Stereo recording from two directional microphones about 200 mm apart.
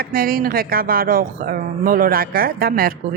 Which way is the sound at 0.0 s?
45° right (ahead or behind).